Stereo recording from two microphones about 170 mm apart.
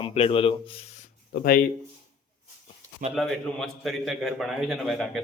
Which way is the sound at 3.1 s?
Centre (ahead or behind).